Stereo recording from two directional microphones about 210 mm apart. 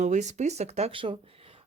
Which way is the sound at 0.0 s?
35° right (ahead or behind).